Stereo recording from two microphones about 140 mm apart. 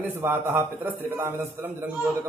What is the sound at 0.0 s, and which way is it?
A man's voice, 15° right (ahead or behind).